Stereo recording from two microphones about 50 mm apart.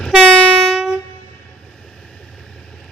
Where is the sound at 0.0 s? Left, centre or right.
Centre.